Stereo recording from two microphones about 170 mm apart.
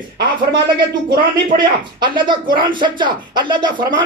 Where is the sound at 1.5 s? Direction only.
25° right (ahead or behind).